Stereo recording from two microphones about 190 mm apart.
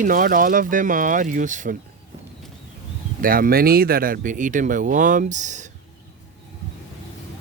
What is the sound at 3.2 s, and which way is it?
Speech, 50° right (ahead or behind).